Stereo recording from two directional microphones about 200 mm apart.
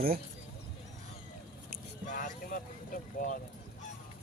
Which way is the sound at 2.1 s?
40° left (ahead or behind).